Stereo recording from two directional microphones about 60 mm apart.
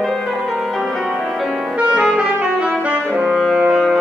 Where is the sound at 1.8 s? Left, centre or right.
Centre.